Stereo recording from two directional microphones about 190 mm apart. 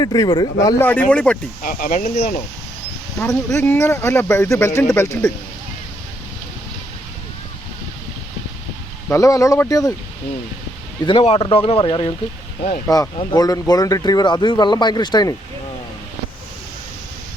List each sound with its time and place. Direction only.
0.0 s speech: 20° left (ahead or behind)
1.6 s speech: 45° left (ahead or behind)
3.2 s speech: 15° left (ahead or behind)
9.0 s speech: 15° left (ahead or behind)
11.0 s speech: 25° left (ahead or behind)
13.1 s speech: 20° left (ahead or behind)